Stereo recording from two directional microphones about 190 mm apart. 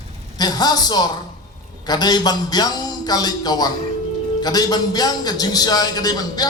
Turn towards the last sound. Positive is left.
turn(degrees=20)  # may be behind; listen again after turning